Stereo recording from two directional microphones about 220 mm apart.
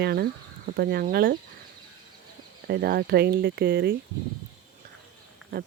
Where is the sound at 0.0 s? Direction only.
45° right (ahead or behind).